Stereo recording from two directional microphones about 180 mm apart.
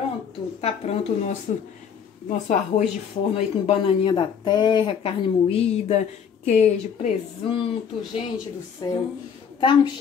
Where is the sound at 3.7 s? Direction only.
30° left (ahead or behind).